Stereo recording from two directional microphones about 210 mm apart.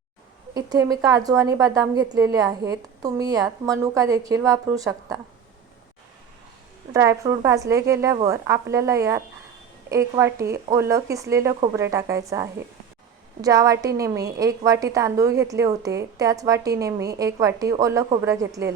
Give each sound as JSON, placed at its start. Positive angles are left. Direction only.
{"t": 0.5, "sound": "a woman's voice", "side_deg": -15}
{"t": 6.9, "sound": "a woman's voice", "side_deg": -15}